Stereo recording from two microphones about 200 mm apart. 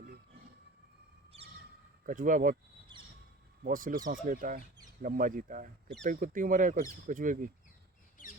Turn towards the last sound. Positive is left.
turn(degrees=-40)  # may be behind; listen again after turning